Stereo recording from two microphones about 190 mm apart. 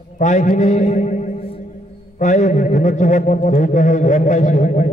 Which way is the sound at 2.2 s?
40° left (ahead or behind).